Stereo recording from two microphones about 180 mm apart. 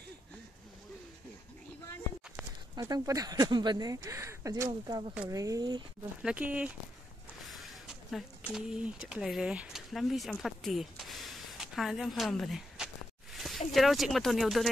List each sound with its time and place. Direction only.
2.7 s speech: 20° right (ahead or behind)
6.2 s speech: 10° right (ahead or behind)
10.4 s a sound: centre (ahead or behind)